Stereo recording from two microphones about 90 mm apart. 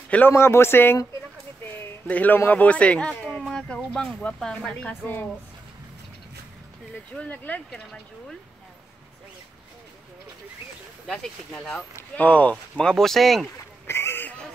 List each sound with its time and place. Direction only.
0.3 s speech: 30° left (ahead or behind); by 4.9 s 10° left (ahead or behind)
5.0 s speech: 20° left (ahead or behind)
7.2 s speech: 15° left (ahead or behind)
11.1 s speech: 5° left (ahead or behind)
12.2 s speech: 15° left (ahead or behind)
13.8 s a sound: 30° left (ahead or behind)